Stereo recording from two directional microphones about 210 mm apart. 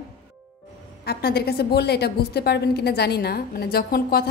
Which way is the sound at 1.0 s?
50° left (ahead or behind).